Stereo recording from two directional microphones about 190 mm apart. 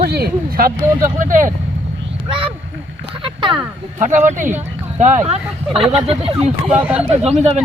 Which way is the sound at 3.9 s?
40° right (ahead or behind).